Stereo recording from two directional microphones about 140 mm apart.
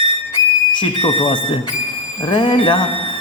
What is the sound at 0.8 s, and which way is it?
Speech, 40° left (ahead or behind).